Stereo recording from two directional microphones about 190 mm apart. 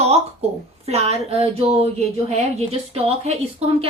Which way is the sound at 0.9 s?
35° right (ahead or behind).